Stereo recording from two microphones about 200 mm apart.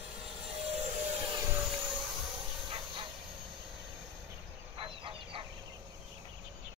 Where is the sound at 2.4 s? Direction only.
25° right (ahead or behind).